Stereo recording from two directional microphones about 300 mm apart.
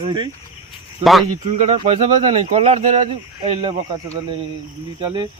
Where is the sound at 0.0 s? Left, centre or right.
Centre.